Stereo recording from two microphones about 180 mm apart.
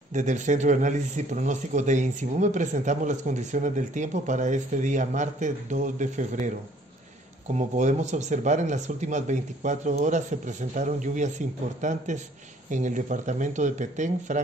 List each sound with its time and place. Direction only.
0.1 s speech: 40° right (ahead or behind)
7.5 s speech: 40° right (ahead or behind)